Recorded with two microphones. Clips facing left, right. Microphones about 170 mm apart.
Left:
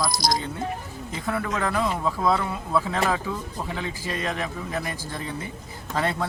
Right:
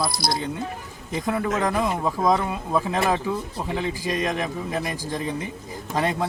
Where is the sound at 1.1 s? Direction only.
15° right (ahead or behind).